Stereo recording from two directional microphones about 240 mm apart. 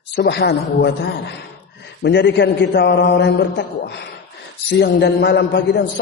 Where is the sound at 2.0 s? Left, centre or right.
Left.